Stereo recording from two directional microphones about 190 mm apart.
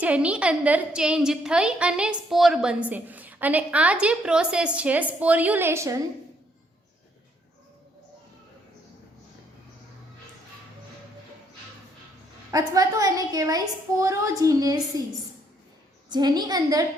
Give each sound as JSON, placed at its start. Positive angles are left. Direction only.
{"t": 0.0, "sound": "a woman's voice", "side_deg": -5}
{"t": 12.5, "sound": "a woman's voice", "side_deg": -20}
{"t": 16.0, "sound": "a woman's voice", "side_deg": -20}